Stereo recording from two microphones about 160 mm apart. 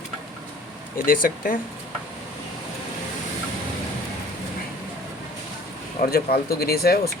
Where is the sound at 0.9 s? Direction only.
60° left (ahead or behind).